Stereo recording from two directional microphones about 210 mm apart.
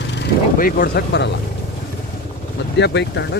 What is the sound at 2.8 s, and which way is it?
Speech, 55° left (ahead or behind).